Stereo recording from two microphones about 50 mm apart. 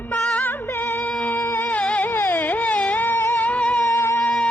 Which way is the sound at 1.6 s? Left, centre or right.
Left.